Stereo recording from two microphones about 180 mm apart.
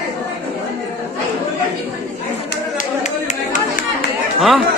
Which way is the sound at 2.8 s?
40° left (ahead or behind).